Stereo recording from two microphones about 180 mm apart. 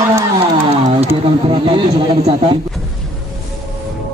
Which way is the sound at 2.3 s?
30° right (ahead or behind).